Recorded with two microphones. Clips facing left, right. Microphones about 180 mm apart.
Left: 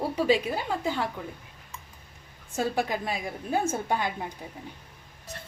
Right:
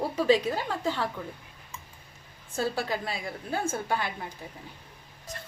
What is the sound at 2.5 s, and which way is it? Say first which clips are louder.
A woman's voice: left 2 dB; 15° left (ahead or behind).